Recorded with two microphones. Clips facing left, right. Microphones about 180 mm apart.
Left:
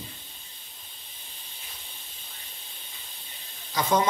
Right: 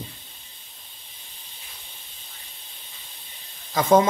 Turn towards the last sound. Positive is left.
turn(degrees=-50)  # may be behind; listen again after turning